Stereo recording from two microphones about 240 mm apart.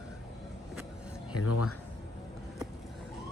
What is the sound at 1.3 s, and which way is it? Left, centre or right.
Speech, left.